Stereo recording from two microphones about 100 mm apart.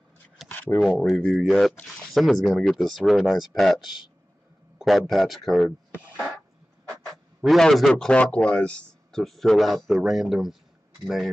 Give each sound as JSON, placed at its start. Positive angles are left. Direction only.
{"t": 0.5, "sound": "a sound", "side_deg": 20}
{"t": 0.7, "sound": "speech", "side_deg": 0}
{"t": 7.4, "sound": "speech", "side_deg": 0}